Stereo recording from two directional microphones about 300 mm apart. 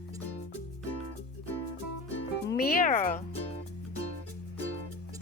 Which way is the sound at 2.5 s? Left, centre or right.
Left.